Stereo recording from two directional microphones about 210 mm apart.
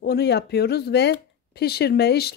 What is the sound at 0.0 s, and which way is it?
Speech, 50° left (ahead or behind).